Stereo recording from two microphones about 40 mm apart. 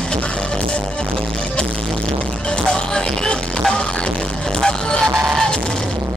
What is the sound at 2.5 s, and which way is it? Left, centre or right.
Music, left.